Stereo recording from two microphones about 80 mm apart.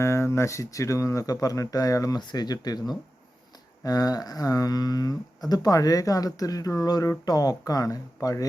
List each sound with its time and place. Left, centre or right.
0.0 s speech: left
2.1 s speech: left